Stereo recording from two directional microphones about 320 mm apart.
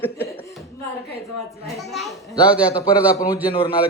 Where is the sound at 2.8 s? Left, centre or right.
Centre.